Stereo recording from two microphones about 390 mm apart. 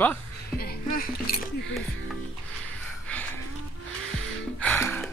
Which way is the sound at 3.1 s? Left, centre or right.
Centre.